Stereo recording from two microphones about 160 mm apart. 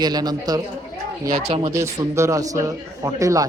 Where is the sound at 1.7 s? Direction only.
20° right (ahead or behind).